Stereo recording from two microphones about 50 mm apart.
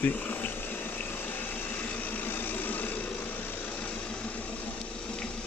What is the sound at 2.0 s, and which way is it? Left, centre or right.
Vehicle, left.